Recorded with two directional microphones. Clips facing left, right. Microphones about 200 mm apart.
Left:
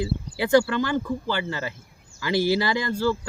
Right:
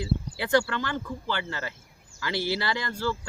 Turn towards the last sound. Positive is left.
turn(degrees=10)  # may be behind; listen again after turning